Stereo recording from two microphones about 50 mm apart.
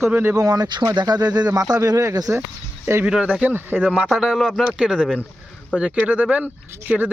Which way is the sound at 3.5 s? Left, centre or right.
Right.